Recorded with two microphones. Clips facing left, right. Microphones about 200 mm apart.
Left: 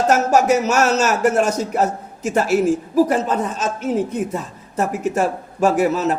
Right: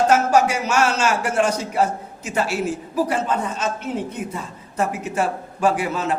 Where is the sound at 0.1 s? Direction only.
45° left (ahead or behind).